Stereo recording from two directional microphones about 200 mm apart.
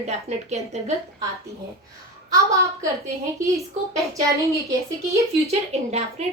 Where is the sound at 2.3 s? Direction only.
15° right (ahead or behind).